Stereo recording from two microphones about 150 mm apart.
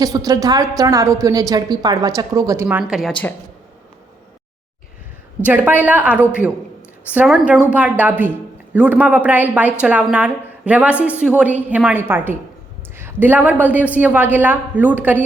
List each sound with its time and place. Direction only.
0.0 s a woman's voice: 25° right (ahead or behind)
2.6 s speech: 5° right (ahead or behind)
5.5 s a woman's voice: 10° right (ahead or behind)